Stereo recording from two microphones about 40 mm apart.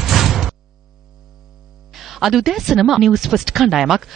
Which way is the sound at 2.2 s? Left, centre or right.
Centre.